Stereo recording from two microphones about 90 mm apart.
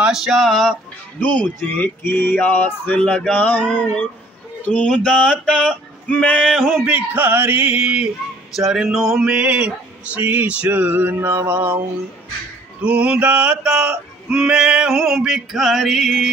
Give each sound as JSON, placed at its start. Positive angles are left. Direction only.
{"t": 0.0, "sound": "a sound", "side_deg": -5}
{"t": 1.2, "sound": "speech", "side_deg": 20}
{"t": 3.0, "sound": "male singing", "side_deg": 10}
{"t": 6.5, "sound": "a sound", "side_deg": 0}
{"t": 6.8, "sound": "male singing", "side_deg": -20}
{"t": 12.8, "sound": "male singing", "side_deg": -15}